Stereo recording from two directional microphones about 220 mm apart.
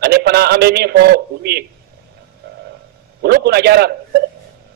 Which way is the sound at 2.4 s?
45° right (ahead or behind).